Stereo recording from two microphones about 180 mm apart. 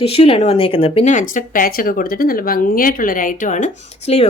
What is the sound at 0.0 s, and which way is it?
Speech, 30° left (ahead or behind).